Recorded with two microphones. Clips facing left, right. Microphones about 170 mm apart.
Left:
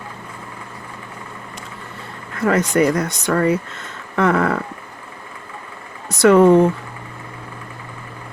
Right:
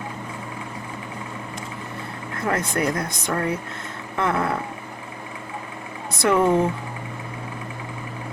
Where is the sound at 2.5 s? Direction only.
80° left.